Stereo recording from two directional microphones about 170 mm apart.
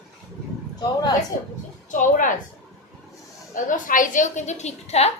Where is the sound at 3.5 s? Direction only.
50° left (ahead or behind).